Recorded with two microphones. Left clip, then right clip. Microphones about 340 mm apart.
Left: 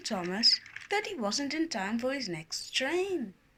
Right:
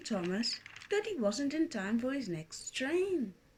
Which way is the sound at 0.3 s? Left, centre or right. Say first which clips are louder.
Left 10 dB; centre.